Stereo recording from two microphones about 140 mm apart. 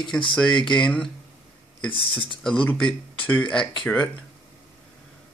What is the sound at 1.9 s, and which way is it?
Speech, 35° left (ahead or behind).